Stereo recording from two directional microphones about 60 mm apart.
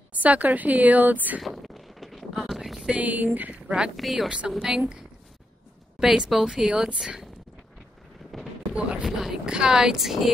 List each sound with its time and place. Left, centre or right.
0.1 s a woman's voice: right
1.4 s a sound: centre
2.9 s a woman's voice: right
3.6 s speech: centre
3.9 s speech: centre
8.3 s a sound: centre
9.0 s speech: centre